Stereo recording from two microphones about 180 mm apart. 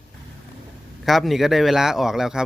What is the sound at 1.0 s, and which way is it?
Speech, centre (ahead or behind).